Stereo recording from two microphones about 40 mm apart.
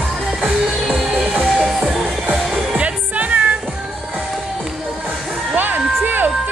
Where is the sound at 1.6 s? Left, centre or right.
Centre.